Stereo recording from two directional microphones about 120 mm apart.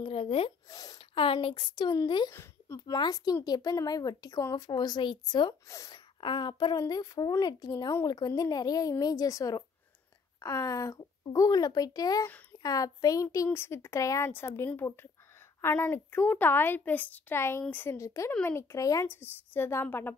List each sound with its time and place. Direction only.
0.0 s speech: 50° left (ahead or behind)
0.7 s speech: 30° left (ahead or behind)
0.9 s a woman's voice: 50° left (ahead or behind)
2.3 s a sound: 20° left (ahead or behind)
2.9 s a woman's voice: 35° left (ahead or behind)
5.7 s a woman's voice: 25° left (ahead or behind)
5.9 s a woman's voice: 40° left (ahead or behind); by 20.2 s 20° left (ahead or behind)